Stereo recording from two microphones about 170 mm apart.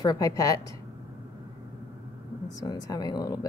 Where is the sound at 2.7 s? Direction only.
25° left (ahead or behind).